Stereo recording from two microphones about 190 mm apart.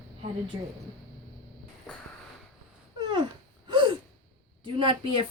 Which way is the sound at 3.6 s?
25° right (ahead or behind).